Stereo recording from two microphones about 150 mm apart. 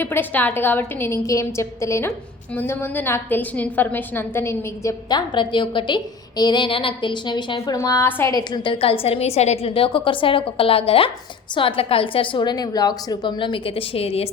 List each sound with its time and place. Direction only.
0.0 s a woman's voice: 15° left (ahead or behind); by 14.3 s 40° left (ahead or behind)